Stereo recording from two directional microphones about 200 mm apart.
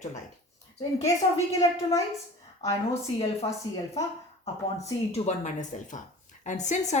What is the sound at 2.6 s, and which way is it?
Speech, 35° left (ahead or behind).